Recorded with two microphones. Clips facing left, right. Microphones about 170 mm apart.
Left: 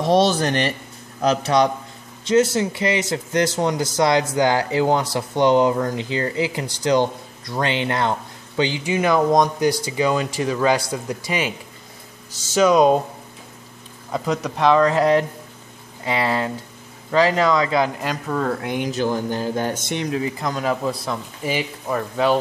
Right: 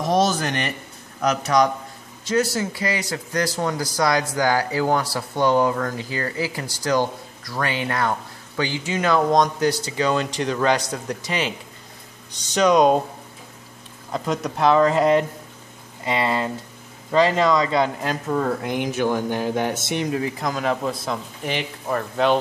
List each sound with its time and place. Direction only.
0.0 s speech: 30° left (ahead or behind); by 12.9 s centre (ahead or behind)
14.1 s speech: centre (ahead or behind)
19.9 s speech: 5° right (ahead or behind)